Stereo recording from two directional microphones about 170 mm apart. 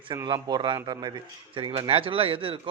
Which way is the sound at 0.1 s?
25° right (ahead or behind).